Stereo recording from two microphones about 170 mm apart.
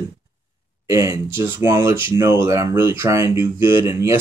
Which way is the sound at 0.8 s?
20° right (ahead or behind).